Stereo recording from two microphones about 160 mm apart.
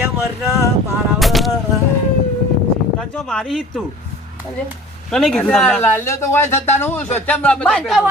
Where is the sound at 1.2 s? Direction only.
Centre (ahead or behind).